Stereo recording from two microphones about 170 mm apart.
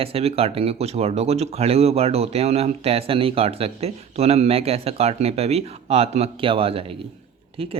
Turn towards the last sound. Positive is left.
turn(degrees=-35)  # may be behind; listen again after turning